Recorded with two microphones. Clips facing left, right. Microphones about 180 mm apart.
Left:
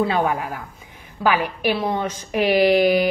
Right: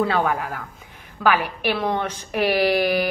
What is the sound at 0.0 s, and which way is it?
A woman's voice, 15° left (ahead or behind).